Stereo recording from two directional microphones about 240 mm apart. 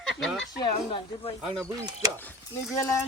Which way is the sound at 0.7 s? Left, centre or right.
Left.